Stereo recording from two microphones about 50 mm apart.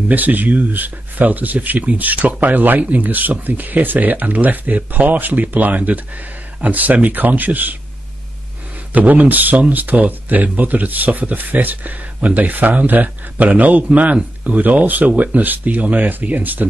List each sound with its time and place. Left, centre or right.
0.1 s speech: right
8.9 s speech: right